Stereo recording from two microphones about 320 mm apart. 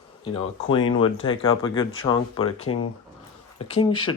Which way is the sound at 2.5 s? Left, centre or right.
Left.